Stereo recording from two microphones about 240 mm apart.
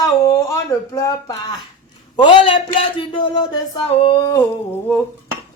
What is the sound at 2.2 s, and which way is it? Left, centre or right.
A man's voice, left.